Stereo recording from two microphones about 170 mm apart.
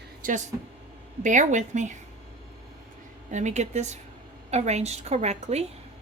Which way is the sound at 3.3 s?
40° right (ahead or behind).